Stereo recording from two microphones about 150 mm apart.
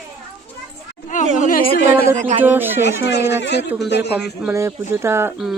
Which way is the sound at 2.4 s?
15° right (ahead or behind).